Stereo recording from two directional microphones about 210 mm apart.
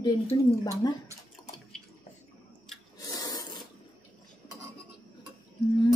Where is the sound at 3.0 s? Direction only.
15° left (ahead or behind).